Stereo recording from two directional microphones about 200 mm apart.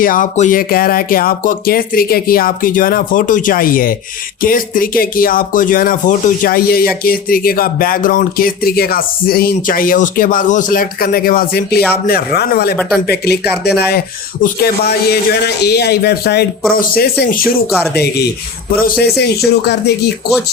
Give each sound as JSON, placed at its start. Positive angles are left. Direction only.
{"t": 0.0, "sound": "speech", "side_deg": 40}